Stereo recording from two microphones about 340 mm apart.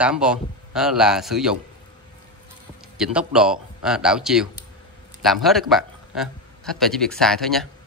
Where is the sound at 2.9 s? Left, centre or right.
Centre.